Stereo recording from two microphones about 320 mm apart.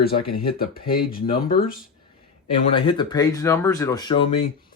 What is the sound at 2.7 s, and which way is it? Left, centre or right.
Speech, centre.